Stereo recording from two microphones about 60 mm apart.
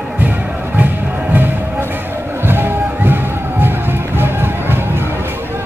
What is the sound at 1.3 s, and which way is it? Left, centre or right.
Music, right.